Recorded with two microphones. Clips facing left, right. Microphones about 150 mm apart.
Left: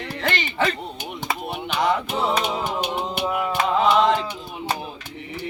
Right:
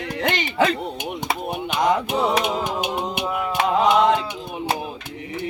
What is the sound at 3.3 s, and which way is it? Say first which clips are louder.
Music: left 1 dB; 5° left (ahead or behind).